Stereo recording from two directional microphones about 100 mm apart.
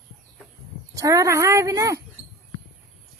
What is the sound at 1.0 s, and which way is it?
Speech, 35° right (ahead or behind).